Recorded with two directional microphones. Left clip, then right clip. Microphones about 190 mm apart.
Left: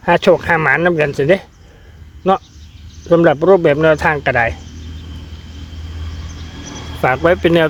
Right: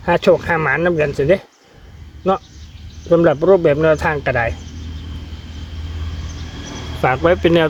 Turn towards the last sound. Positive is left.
turn(degrees=15)  # may be behind; listen again after turning